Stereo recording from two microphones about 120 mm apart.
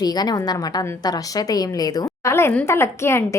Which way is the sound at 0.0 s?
35° left (ahead or behind).